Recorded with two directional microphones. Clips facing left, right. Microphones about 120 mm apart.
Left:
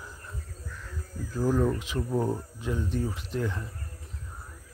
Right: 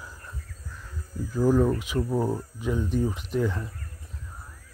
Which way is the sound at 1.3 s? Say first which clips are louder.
Right 4 dB; 15° right (ahead or behind).